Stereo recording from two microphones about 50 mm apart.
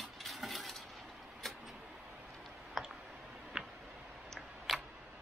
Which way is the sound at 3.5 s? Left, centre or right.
Centre.